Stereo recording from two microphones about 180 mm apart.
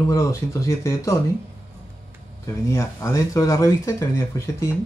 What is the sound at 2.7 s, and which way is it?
A man's voice, 15° left (ahead or behind).